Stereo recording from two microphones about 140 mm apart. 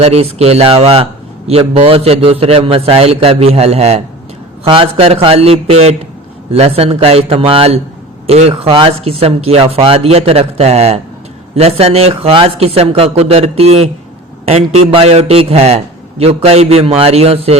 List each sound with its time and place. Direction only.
0.0 s a man's voice: 45° right (ahead or behind)